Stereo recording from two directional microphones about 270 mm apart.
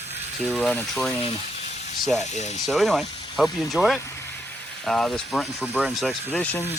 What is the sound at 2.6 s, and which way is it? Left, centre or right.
Speech, centre.